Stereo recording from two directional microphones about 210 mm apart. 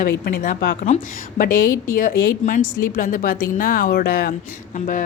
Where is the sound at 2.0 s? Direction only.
40° left (ahead or behind).